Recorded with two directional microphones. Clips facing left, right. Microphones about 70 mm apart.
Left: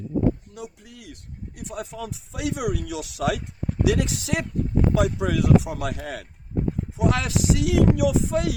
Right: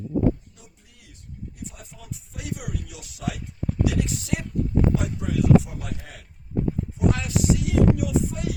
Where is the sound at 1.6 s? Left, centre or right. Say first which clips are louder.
Left 9 dB; left.